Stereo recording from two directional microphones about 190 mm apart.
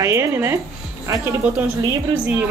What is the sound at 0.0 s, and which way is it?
A woman's voice, 15° right (ahead or behind).